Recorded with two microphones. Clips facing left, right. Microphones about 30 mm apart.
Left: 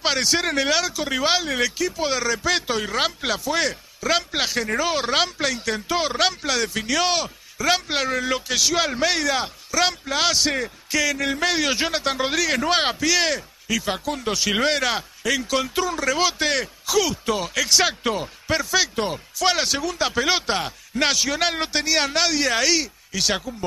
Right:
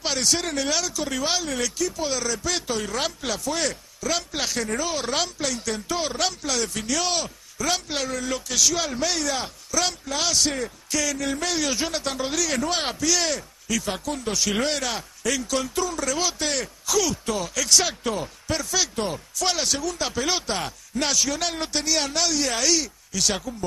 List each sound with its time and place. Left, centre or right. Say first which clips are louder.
0.0 s speech: left 4 dB; left